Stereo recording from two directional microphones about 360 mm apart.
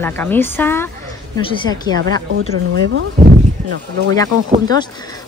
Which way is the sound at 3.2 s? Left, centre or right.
Right.